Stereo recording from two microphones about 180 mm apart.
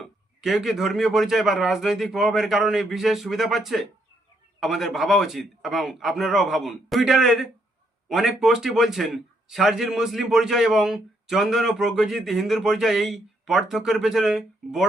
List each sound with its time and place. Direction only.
0.0 s a man's voice: centre (ahead or behind)